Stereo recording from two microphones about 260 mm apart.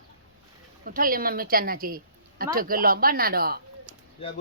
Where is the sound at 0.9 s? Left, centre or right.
Right.